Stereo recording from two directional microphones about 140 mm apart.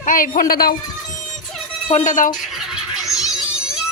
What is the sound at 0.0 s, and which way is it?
Speech, 75° left (ahead or behind).